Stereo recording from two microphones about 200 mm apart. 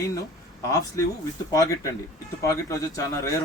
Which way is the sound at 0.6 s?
15° left (ahead or behind).